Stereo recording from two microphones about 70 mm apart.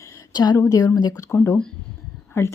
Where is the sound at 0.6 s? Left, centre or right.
Left.